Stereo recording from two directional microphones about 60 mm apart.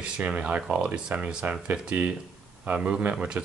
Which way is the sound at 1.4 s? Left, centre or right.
Right.